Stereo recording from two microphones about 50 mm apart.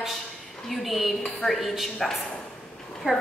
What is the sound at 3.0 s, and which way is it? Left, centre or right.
Speech, right.